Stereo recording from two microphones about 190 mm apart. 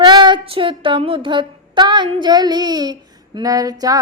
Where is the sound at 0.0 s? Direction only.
20° right (ahead or behind).